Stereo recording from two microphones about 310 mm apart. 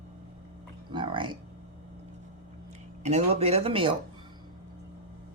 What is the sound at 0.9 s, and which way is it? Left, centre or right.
Music, centre.